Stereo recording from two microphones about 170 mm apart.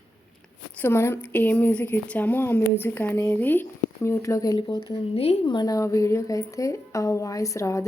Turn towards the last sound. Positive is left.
turn(degrees=20)  # may be behind; listen again after turning